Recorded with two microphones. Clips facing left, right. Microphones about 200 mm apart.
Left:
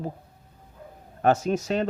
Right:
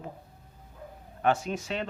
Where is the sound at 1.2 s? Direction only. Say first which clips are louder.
Left 5 dB; 40° left (ahead or behind).